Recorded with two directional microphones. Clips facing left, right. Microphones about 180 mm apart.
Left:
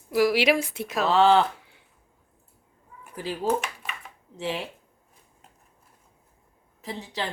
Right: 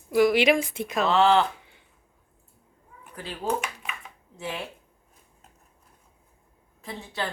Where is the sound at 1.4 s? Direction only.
5° left (ahead or behind).